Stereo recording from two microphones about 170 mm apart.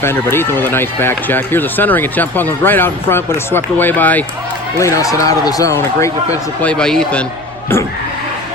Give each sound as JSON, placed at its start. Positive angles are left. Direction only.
{"t": 0.0, "sound": "speech", "side_deg": 15}
{"t": 6.6, "sound": "speech", "side_deg": 5}